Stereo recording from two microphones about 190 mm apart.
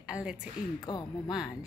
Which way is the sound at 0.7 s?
20° left (ahead or behind).